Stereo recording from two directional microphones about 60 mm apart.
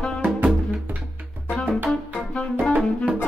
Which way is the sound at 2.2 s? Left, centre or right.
Centre.